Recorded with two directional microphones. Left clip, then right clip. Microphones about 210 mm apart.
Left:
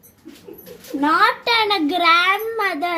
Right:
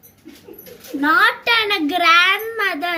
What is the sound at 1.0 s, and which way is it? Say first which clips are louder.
A child's voice: right 1 dB; 15° right (ahead or behind).